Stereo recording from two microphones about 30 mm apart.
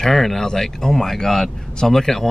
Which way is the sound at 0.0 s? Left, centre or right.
Centre.